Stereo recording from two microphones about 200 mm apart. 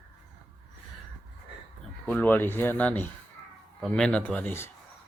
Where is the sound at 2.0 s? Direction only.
10° left (ahead or behind).